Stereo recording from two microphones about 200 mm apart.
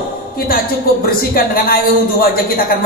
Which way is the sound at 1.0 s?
45° left (ahead or behind).